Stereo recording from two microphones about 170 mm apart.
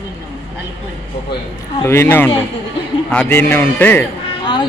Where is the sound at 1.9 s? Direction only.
15° left (ahead or behind).